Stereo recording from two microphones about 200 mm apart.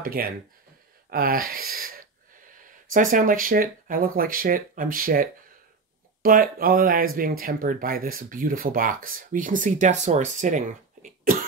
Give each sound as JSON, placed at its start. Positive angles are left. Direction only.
{"t": 0.0, "sound": "speech", "side_deg": -45}